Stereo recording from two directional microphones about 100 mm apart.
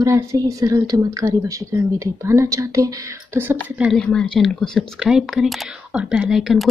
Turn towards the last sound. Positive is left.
turn(degrees=0)  # may be behind; listen again after turning